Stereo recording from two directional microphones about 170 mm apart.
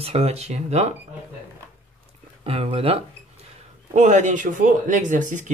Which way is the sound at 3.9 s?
45° right (ahead or behind).